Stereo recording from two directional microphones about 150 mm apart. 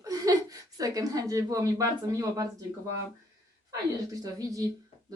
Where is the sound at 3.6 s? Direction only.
25° right (ahead or behind).